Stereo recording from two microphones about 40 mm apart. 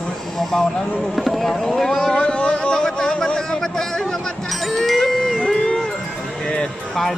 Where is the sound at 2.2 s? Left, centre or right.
Left.